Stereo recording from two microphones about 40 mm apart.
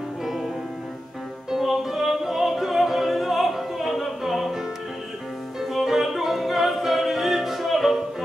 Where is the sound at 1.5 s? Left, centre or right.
Centre.